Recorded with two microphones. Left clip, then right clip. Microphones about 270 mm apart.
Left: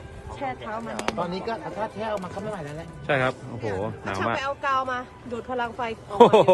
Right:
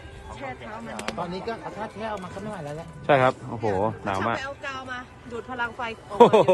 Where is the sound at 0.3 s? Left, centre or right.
Centre.